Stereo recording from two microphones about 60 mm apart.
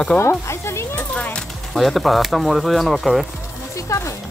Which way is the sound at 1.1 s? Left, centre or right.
Left.